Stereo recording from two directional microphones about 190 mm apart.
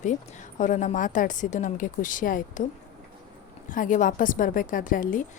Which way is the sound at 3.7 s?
45° left (ahead or behind).